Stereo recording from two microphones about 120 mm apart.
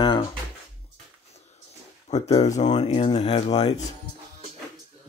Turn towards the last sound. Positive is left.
turn(degrees=55)  # may be behind; listen again after turning